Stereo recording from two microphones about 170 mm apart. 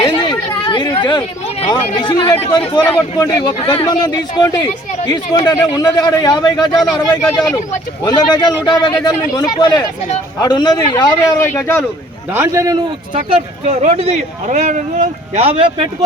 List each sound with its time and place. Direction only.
0.0 s chatter: 25° left (ahead or behind)
1.7 s speech: 25° left (ahead or behind)
8.0 s speech: 25° left (ahead or behind)
12.3 s a man's voice: 15° right (ahead or behind)
13.7 s speech: 40° right (ahead or behind)